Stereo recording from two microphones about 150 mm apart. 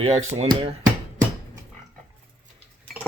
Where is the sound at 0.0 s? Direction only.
45° right (ahead or behind).